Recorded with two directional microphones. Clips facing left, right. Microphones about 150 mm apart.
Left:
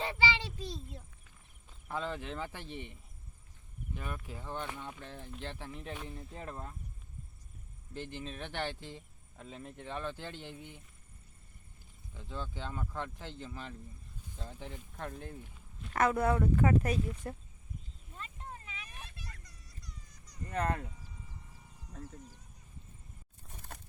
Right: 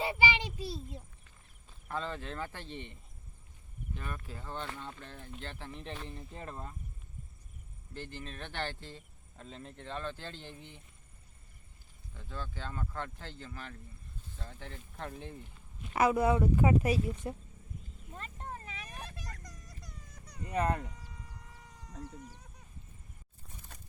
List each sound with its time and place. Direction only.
0.0 s child singing: 15° right (ahead or behind)
1.9 s speech: 15° left (ahead or behind)
7.9 s speech: 15° left (ahead or behind)
12.1 s speech: 15° left (ahead or behind); by 17.3 s 10° right (ahead or behind)
18.1 s a sound: 50° right (ahead or behind)
20.4 s speech: 10° right (ahead or behind)
21.5 s insect: 90° right